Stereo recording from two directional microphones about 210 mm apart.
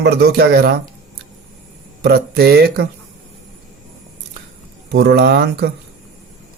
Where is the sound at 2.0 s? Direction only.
50° right (ahead or behind).